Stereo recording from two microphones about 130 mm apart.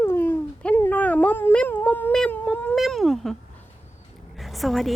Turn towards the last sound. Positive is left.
turn(degrees=0)  # may be behind; listen again after turning